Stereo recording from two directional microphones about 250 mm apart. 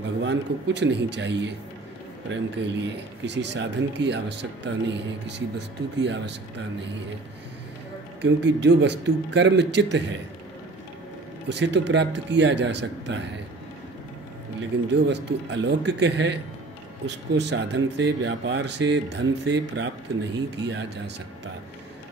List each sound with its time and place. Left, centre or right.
0.2 s speech: right
8.2 s speech: right
11.4 s speech: right
14.9 s speech: right